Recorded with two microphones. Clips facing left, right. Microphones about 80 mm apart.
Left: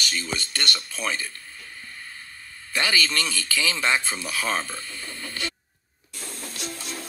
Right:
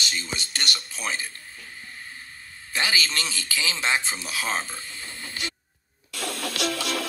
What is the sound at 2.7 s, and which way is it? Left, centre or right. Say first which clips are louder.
Speech: left 2 dB; centre.